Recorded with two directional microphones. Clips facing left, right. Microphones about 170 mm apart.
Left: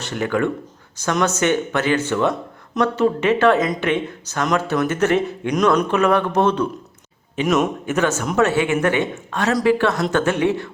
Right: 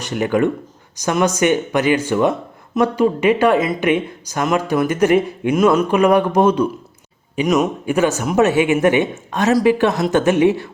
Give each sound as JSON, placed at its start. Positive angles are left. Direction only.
{"t": 0.0, "sound": "speech", "side_deg": -15}
{"t": 7.4, "sound": "a man's voice", "side_deg": 0}
{"t": 7.9, "sound": "speech", "side_deg": -10}